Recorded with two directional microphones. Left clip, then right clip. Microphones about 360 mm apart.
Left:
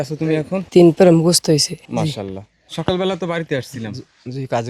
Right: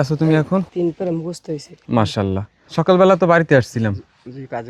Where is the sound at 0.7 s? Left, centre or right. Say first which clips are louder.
Left 11 dB; left.